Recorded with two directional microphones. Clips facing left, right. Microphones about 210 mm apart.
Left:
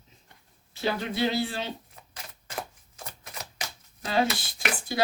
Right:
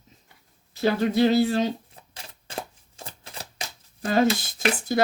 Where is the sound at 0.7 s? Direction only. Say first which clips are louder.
Right 7 dB; 40° right (ahead or behind).